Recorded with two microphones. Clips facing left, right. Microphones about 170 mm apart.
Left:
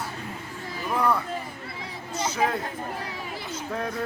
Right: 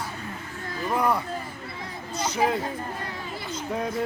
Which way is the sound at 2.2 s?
5° left (ahead or behind).